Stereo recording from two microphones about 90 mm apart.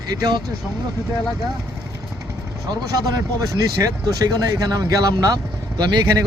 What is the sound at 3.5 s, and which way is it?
Speech, 45° right (ahead or behind).